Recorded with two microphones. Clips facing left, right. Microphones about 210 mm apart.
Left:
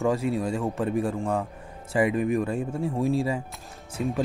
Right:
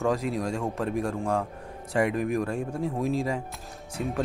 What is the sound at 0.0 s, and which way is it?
Speech, centre (ahead or behind).